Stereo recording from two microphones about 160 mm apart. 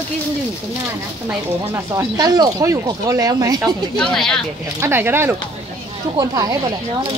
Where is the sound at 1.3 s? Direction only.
15° right (ahead or behind).